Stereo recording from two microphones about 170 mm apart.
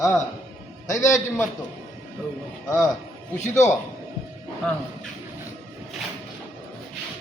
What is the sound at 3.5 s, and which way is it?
Speech, 15° left (ahead or behind).